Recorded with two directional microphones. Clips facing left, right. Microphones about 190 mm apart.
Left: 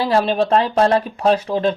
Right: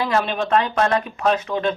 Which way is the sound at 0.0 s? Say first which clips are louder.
Left 5 dB; 35° left (ahead or behind).